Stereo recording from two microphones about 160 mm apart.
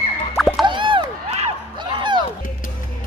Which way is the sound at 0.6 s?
30° right (ahead or behind).